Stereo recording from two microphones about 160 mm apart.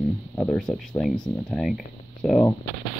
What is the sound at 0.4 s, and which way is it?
Speech, 5° left (ahead or behind).